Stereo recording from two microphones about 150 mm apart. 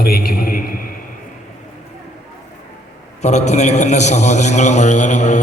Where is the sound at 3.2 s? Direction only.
50° left (ahead or behind).